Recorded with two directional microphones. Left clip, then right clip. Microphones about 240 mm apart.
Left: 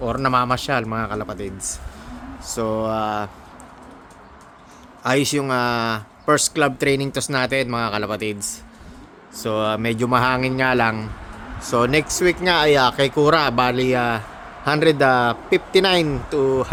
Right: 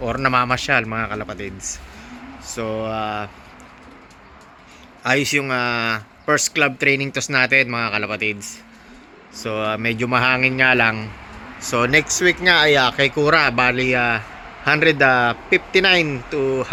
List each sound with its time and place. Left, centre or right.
0.0 s speech: centre
2.4 s mantra: centre
5.0 s speech: centre